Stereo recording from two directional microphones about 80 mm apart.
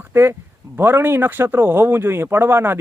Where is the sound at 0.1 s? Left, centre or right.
Right.